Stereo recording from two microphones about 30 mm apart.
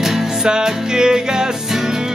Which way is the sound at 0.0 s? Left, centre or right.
Centre.